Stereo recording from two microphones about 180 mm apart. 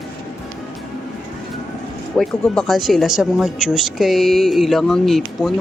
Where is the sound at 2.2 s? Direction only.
Centre (ahead or behind).